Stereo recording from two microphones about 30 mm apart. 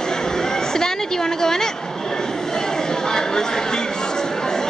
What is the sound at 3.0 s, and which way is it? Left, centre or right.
Chatter, left.